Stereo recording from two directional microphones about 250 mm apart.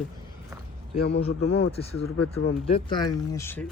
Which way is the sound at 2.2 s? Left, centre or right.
Left.